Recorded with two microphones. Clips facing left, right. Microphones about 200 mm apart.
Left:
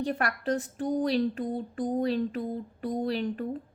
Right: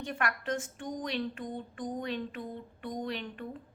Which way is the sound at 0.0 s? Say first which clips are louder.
Left 5 dB; 35° left (ahead or behind).